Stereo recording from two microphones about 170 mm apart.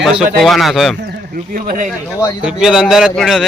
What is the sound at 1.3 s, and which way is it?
Speech, 55° right (ahead or behind).